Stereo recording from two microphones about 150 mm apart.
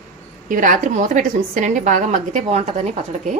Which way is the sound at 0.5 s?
65° right (ahead or behind).